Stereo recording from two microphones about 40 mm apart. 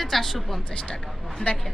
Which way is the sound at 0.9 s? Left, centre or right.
Centre.